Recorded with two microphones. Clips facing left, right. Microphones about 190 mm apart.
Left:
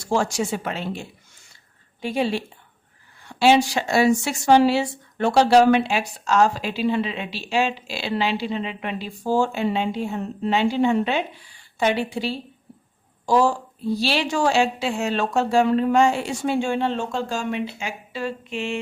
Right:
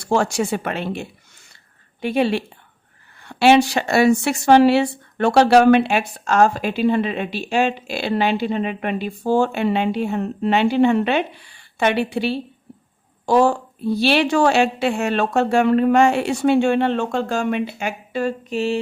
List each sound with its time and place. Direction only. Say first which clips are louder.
0.0 s speech: right 3 dB; 60° right (ahead or behind); by 18.8 s 40° right (ahead or behind)